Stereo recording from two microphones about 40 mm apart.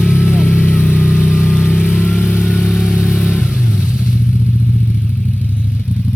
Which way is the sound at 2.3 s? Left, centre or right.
Left.